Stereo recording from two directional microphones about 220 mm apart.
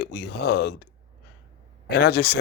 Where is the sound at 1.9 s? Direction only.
50° left (ahead or behind).